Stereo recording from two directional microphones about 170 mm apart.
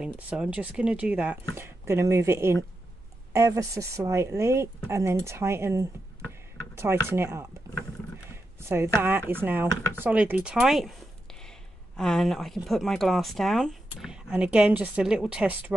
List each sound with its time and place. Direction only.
0.0 s speech: 5° right (ahead or behind)
6.7 s a sound: 15° right (ahead or behind)
7.1 s speech: 15° right (ahead or behind)
7.7 s wild animals: 20° right (ahead or behind)
8.3 s speech: 15° right (ahead or behind)
12.0 s speech: centre (ahead or behind)